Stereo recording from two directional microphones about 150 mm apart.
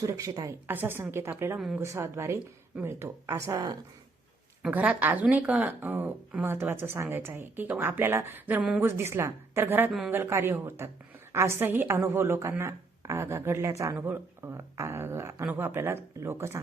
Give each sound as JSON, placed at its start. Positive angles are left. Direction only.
{"t": 0.0, "sound": "a woman's voice", "side_deg": -20}
{"t": 1.5, "sound": "speech", "side_deg": -5}
{"t": 1.8, "sound": "a woman's voice", "side_deg": -15}
{"t": 4.6, "sound": "a woman's voice", "side_deg": -5}